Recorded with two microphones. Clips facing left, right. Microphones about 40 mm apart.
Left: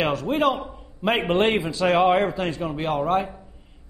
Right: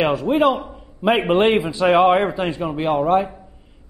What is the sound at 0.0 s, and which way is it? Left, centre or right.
A man's voice, centre.